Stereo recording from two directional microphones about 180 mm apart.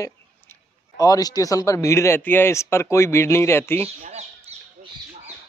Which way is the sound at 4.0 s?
35° right (ahead or behind).